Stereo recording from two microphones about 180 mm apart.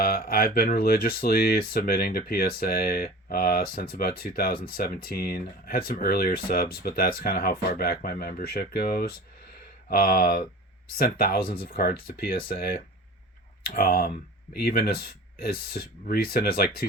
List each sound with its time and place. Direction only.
0.0 s speech: 55° left (ahead or behind)